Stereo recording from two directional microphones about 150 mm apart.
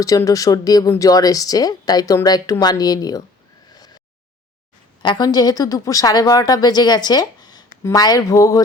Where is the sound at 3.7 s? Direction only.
25° left (ahead or behind).